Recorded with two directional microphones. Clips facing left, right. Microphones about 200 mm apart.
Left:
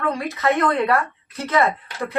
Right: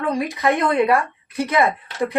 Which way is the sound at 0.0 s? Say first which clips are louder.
Right 2 dB; 15° right (ahead or behind).